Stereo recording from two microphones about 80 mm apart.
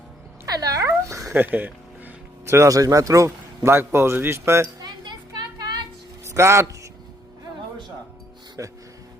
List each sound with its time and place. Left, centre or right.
0.4 s dog: right
0.9 s a sound: right
1.3 s speech: right
2.5 s a man's voice: right
4.8 s children playing: right
5.5 s a sound: right
6.2 s a man's voice: right
8.6 s speech: right